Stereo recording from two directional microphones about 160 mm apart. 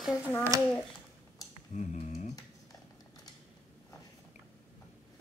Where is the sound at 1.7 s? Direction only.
50° left (ahead or behind).